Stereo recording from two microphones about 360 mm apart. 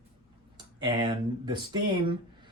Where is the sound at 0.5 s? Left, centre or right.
Centre.